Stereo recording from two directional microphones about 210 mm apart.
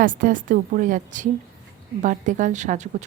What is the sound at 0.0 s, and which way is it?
A woman's voice, 40° right (ahead or behind).